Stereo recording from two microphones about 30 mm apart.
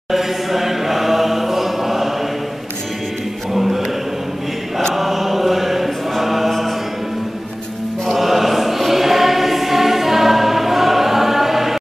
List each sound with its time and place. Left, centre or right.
0.1 s chant: centre
3.5 s choir: centre
4.9 s chant: centre
8.2 s choir: centre